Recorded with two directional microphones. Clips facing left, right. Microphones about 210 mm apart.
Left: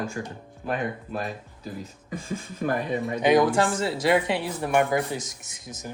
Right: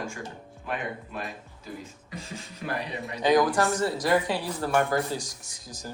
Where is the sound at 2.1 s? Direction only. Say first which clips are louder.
Left 7 dB; 50° left (ahead or behind).